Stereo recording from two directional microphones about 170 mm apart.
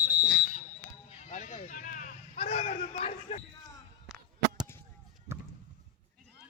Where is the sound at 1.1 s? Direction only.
45° left (ahead or behind).